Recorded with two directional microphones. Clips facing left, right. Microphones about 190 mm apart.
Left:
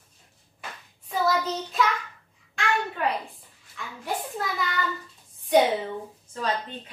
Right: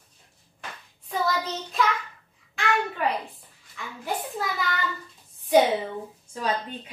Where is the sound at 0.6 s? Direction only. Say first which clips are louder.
Even; centre (ahead or behind).